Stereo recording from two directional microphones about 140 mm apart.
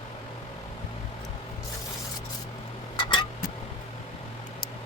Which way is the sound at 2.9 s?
35° left (ahead or behind).